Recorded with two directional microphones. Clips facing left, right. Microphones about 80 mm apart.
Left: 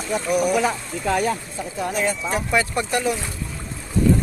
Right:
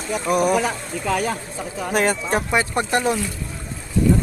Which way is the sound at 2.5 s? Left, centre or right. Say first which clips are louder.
Even; right.